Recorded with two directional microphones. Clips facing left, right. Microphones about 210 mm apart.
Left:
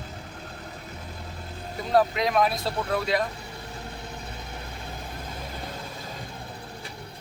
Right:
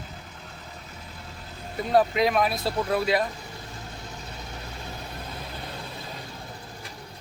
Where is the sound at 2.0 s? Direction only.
5° right (ahead or behind).